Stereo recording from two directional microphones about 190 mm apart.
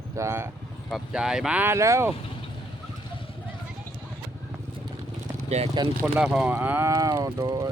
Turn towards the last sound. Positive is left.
turn(degrees=-20)  # may be behind; listen again after turning